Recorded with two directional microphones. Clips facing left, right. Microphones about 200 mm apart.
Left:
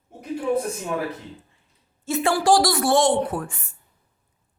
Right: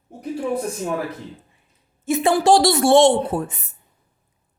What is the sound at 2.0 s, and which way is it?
A woman's voice, 20° right (ahead or behind).